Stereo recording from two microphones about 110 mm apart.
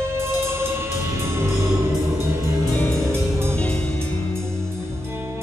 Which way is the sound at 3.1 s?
25° right (ahead or behind).